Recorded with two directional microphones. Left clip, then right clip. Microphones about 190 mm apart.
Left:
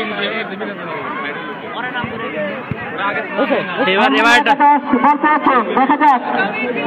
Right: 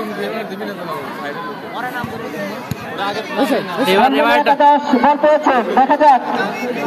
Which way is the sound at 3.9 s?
15° right (ahead or behind).